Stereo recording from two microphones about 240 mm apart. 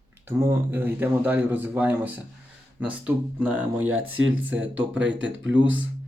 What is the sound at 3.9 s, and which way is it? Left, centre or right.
Speech, right.